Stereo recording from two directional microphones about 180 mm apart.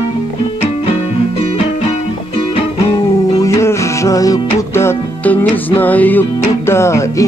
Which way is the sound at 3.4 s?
15° left (ahead or behind).